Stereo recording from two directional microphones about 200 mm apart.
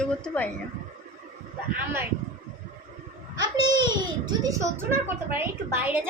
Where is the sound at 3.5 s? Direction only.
20° right (ahead or behind).